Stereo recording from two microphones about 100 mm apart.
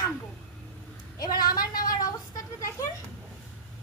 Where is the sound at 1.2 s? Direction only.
40° left (ahead or behind).